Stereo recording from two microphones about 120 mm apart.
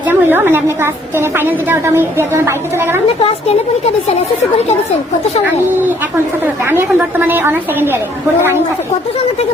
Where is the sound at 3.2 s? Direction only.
50° left (ahead or behind).